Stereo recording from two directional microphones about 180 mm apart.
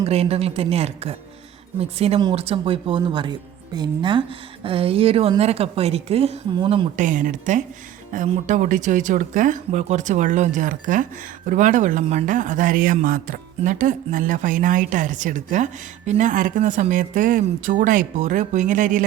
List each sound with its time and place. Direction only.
0.0 s a woman's voice: 35° right (ahead or behind)
6.9 s a man's voice: 45° right (ahead or behind)